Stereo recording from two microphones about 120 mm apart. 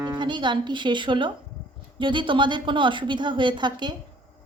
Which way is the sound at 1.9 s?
40° right (ahead or behind).